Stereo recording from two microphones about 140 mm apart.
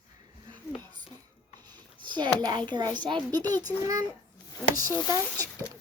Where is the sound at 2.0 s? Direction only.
35° right (ahead or behind).